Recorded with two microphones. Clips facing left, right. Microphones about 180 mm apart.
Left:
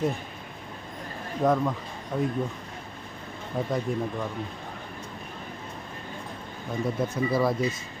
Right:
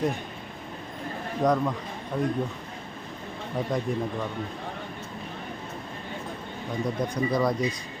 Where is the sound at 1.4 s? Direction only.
5° left (ahead or behind).